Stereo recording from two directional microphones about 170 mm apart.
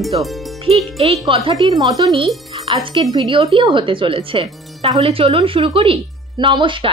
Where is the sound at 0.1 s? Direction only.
30° right (ahead or behind).